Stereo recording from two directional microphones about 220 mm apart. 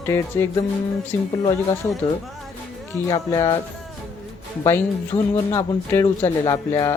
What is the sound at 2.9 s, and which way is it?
Speech, 15° left (ahead or behind).